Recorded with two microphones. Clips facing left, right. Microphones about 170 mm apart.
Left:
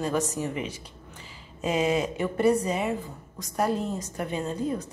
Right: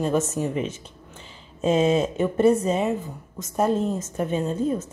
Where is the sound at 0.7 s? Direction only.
10° left (ahead or behind).